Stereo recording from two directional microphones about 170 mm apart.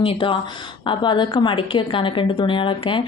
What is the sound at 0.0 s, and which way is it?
A woman's voice, 30° left (ahead or behind).